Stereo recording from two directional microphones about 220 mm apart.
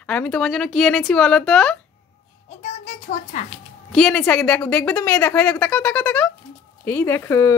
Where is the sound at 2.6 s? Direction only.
30° left (ahead or behind).